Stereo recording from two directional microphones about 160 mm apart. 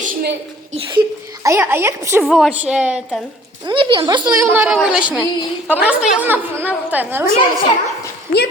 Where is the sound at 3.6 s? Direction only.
30° right (ahead or behind).